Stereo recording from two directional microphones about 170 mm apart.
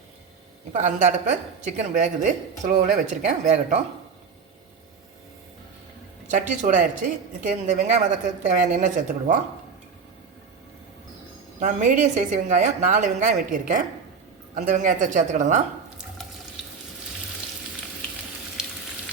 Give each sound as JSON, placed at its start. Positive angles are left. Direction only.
{"t": 0.8, "sound": "a woman's voice", "side_deg": -45}
{"t": 6.3, "sound": "a woman's voice", "side_deg": -50}
{"t": 11.6, "sound": "a woman's voice", "side_deg": -50}